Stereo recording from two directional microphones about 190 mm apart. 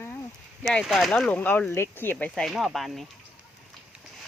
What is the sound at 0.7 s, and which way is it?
Speech, centre (ahead or behind).